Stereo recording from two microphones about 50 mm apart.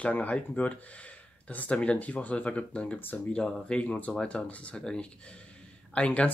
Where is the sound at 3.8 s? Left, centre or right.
Left.